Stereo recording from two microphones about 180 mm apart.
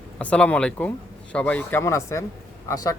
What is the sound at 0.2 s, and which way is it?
A man's voice, 5° left (ahead or behind).